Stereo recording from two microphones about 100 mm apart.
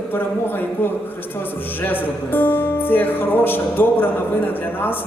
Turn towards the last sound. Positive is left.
turn(degrees=20)  # may be behind; listen again after turning